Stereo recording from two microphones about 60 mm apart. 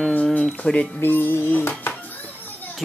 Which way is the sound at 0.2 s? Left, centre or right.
Left.